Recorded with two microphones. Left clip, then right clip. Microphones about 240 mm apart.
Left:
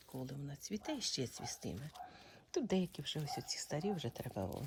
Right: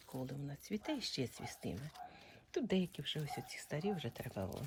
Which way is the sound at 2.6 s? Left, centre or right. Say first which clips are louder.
Right 1 dB; left.